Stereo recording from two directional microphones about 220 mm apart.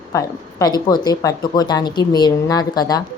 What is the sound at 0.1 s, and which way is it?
A woman's voice, 15° left (ahead or behind).